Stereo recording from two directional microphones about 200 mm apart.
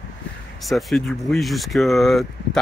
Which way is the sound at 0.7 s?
Centre (ahead or behind).